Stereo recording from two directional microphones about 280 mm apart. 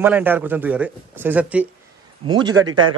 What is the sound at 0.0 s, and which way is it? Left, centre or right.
Speech, centre.